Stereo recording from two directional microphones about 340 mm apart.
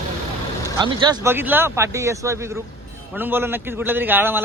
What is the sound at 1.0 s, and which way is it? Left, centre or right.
A man's voice, centre.